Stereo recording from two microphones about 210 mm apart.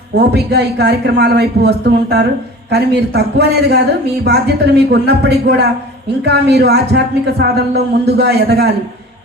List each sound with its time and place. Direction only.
0.2 s a woman's voice: 50° right (ahead or behind)